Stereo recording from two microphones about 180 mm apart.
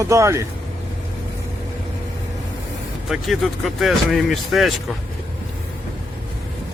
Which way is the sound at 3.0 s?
Centre (ahead or behind).